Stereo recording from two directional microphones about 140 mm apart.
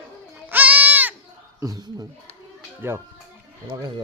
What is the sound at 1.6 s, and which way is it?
Speech, 25° right (ahead or behind).